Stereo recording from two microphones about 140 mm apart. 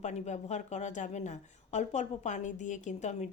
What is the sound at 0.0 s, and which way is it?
Speech, 55° left (ahead or behind).